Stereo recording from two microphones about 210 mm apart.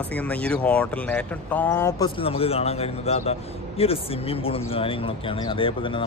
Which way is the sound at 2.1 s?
25° left (ahead or behind).